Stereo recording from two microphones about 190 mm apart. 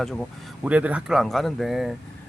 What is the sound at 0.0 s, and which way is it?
Speech, centre (ahead or behind).